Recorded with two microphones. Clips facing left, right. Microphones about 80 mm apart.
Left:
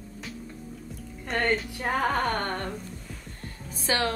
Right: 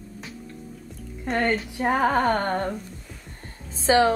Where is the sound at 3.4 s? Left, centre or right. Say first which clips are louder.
Right 9 dB; right.